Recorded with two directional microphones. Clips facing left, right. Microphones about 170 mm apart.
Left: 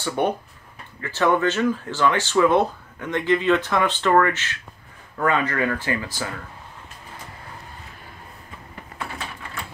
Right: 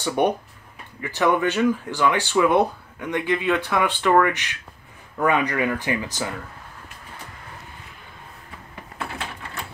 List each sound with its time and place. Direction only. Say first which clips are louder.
0.0 s speech: right 2 dB; 15° right (ahead or behind)